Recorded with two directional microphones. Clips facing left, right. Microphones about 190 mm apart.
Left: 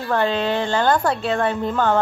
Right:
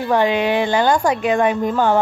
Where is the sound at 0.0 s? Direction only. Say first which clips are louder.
Right 4 dB; 15° right (ahead or behind).